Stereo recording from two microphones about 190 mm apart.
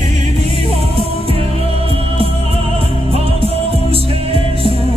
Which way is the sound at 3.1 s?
30° right (ahead or behind).